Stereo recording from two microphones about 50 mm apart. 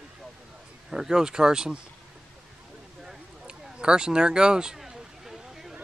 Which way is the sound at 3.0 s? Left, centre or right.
Centre.